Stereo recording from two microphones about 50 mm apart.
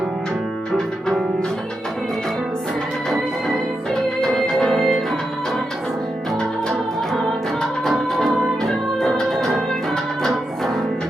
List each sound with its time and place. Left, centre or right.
4.4 s music: centre
6.4 s music: centre